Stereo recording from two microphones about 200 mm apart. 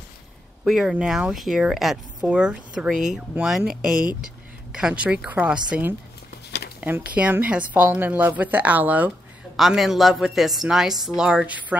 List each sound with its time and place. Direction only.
0.7 s speech: centre (ahead or behind)
6.5 s a sound: 60° left (ahead or behind)
7.2 s speech: 5° right (ahead or behind)